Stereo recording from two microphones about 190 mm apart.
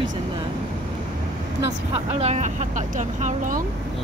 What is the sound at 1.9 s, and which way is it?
Speech, 35° right (ahead or behind).